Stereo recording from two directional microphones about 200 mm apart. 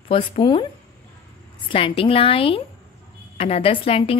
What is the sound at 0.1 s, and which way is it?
Speech, 25° left (ahead or behind).